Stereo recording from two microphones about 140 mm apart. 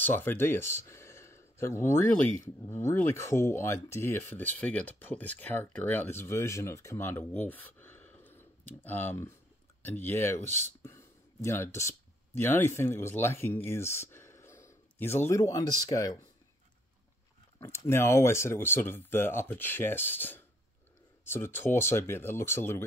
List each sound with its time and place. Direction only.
0.0 s speech: 15° left (ahead or behind)
10.8 s a sound: 20° left (ahead or behind)
12.4 s speech: 15° left (ahead or behind)
17.6 s speech: 20° left (ahead or behind)